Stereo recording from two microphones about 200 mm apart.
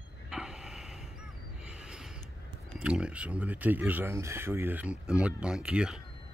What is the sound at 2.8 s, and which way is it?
Speech, 5° right (ahead or behind).